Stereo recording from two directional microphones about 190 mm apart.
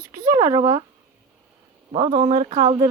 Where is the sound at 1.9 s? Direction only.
30° right (ahead or behind).